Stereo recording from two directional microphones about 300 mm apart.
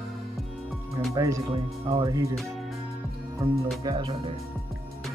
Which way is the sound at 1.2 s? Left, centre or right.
Centre.